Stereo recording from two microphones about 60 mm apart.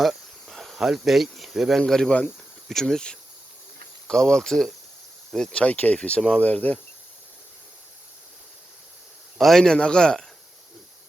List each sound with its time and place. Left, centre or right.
0.0 s cricket: centre
1.9 s a man's voice: centre
5.5 s speech: left
9.4 s a man's voice: centre